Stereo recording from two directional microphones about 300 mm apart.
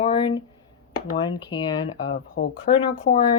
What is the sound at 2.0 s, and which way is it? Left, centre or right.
Speech, left.